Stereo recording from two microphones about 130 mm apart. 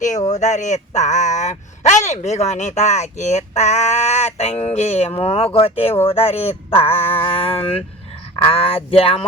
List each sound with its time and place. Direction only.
0.3 s speech: 65° left (ahead or behind); by 9.2 s 50° left (ahead or behind)